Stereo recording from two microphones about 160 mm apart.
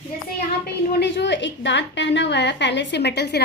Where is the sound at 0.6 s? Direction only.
90° left.